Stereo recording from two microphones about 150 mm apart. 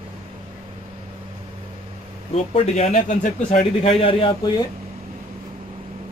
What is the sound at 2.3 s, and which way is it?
Speech, 50° left (ahead or behind).